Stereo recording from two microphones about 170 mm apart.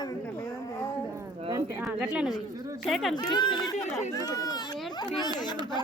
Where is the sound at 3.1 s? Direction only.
25° left (ahead or behind).